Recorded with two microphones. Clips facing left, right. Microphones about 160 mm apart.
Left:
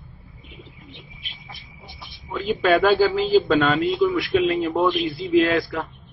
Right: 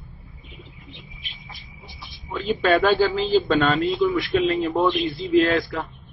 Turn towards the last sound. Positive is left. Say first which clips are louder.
# even
turn(degrees=0)  # may be behind; listen again after turning